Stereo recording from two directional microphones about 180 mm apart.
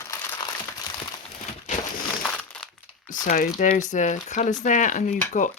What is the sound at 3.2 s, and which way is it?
Speech, 45° left (ahead or behind).